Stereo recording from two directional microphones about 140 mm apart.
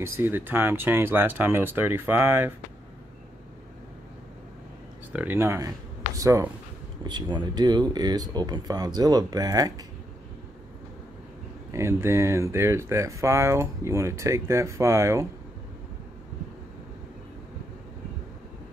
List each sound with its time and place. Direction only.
0.0 s speech: 15° right (ahead or behind)
5.1 s speech: 15° right (ahead or behind)
11.7 s speech: 20° right (ahead or behind)